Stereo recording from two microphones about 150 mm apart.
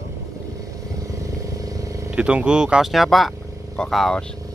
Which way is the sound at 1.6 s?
20° right (ahead or behind).